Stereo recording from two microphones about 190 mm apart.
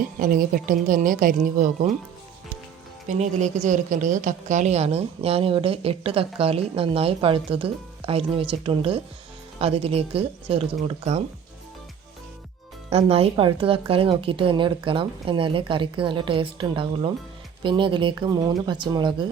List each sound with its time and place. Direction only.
0.0 s speech: 50° right (ahead or behind)
3.1 s a woman's voice: 40° right (ahead or behind)
12.9 s a woman's voice: 30° right (ahead or behind)